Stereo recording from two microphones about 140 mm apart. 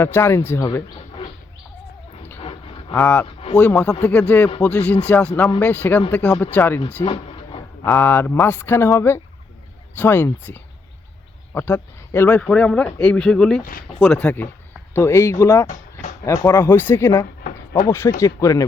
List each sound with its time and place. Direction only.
0.0 s speech: 20° left (ahead or behind)
2.4 s a sound: 40° left (ahead or behind)
3.0 s speech: 10° left (ahead or behind)
5.3 s speech: 25° left (ahead or behind)
5.5 s speech: 10° left (ahead or behind)
7.0 s a sound: 40° left (ahead or behind)
7.9 s speech: 15° left (ahead or behind)
15.6 s a sound: 60° left (ahead or behind)
16.2 s speech: 20° left (ahead or behind)